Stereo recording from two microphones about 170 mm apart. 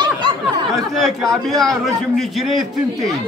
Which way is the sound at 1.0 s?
Centre (ahead or behind).